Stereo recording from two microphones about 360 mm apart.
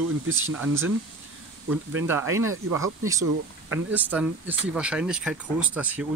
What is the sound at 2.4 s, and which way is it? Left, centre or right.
Speech, right.